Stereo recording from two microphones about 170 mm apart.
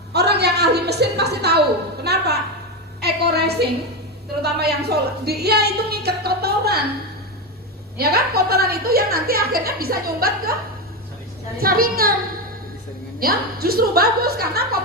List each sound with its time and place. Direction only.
0.1 s a sound: 75° right (ahead or behind)
2.0 s music: 70° right (ahead or behind)
3.0 s a sound: 75° right (ahead or behind)
4.4 s speech: 70° right (ahead or behind)
7.9 s a woman's voice: 65° right (ahead or behind)
11.5 s a woman's voice: 60° right (ahead or behind)
13.1 s a woman's voice: 60° right (ahead or behind)